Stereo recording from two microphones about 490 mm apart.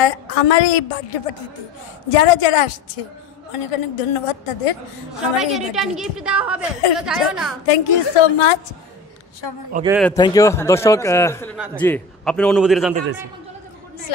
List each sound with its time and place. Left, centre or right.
0.0 s a woman's voice: left
3.7 s a woman's voice: left
5.4 s speech: centre
7.6 s a woman's voice: left
9.7 s speech: centre
9.9 s speech: centre